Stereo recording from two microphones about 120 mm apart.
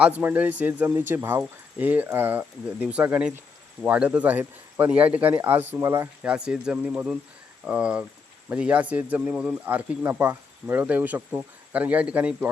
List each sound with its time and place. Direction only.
0.2 s speech: 15° right (ahead or behind)
6.2 s speech: 10° right (ahead or behind)